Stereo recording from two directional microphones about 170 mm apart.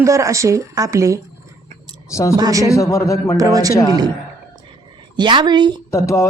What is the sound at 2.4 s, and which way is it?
Speech, 20° right (ahead or behind).